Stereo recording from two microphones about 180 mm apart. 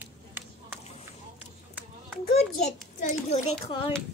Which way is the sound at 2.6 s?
40° left (ahead or behind).